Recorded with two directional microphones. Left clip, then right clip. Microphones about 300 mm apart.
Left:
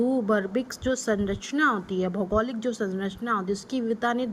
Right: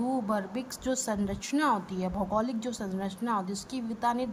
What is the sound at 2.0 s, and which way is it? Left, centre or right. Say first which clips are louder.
Speech: left 7 dB; right.